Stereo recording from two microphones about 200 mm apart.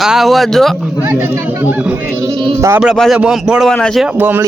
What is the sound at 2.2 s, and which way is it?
Sheep, 25° right (ahead or behind).